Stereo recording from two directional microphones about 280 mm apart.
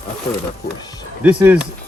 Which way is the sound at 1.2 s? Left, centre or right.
Centre.